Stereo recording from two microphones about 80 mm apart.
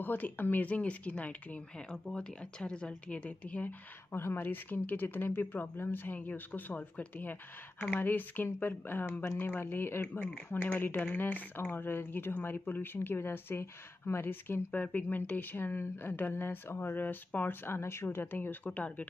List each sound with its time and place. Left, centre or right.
0.0 s speech: left
4.1 s speech: left